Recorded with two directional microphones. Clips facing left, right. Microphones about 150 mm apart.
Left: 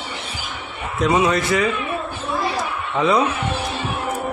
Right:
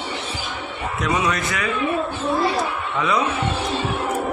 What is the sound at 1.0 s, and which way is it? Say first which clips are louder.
Speech: left 5 dB; 30° left (ahead or behind).